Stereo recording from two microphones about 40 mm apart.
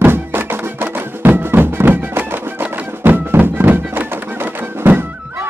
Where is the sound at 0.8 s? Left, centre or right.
Right.